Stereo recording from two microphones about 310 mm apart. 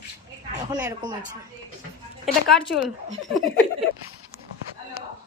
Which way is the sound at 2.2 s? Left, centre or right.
Centre.